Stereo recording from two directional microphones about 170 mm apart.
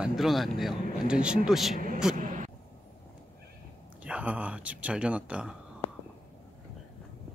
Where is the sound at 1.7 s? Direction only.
55° right (ahead or behind).